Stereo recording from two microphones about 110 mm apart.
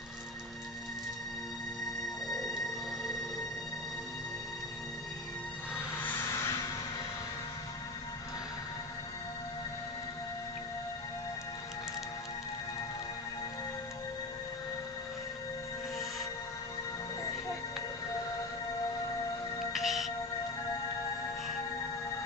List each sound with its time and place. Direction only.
2.2 s train: centre (ahead or behind)
6.0 s music: 25° left (ahead or behind)
19.7 s music: centre (ahead or behind)